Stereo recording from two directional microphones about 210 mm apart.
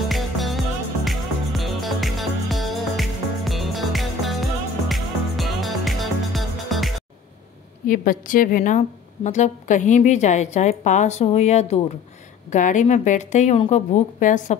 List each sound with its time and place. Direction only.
0.1 s music: centre (ahead or behind)
7.8 s a woman's voice: 40° left (ahead or behind)